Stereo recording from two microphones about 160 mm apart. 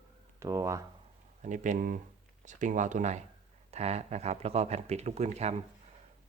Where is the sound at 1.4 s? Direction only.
50° right (ahead or behind).